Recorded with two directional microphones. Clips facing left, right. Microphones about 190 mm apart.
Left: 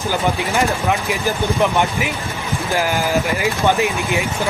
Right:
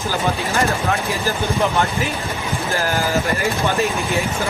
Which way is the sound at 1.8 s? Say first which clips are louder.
Left 1 dB; 15° left (ahead or behind).